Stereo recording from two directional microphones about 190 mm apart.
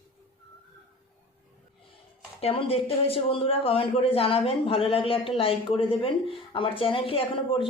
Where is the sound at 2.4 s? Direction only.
30° left (ahead or behind).